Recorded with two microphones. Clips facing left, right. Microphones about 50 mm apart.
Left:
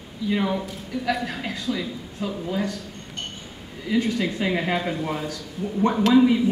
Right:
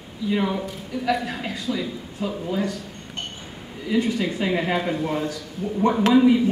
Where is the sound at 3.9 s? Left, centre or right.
Centre.